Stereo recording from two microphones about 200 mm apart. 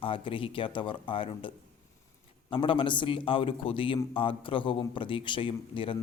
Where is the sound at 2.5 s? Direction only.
25° left (ahead or behind).